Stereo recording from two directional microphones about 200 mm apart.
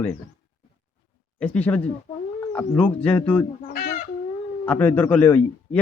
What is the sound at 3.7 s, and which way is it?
Chicken, 45° left (ahead or behind).